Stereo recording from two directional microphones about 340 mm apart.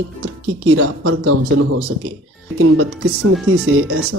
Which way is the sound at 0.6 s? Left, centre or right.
Right.